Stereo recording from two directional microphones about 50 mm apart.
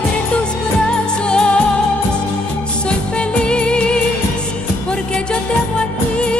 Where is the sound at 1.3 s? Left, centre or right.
Centre.